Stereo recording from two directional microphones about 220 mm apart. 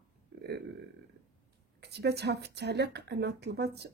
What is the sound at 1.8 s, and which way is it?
Speech, 50° right (ahead or behind).